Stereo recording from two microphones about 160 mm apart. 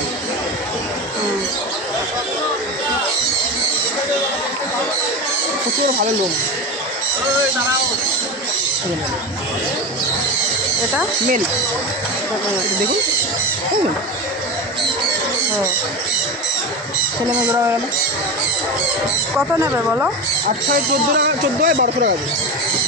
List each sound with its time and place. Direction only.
19.3 s speech: 10° right (ahead or behind)
21.2 s speech: 65° right (ahead or behind)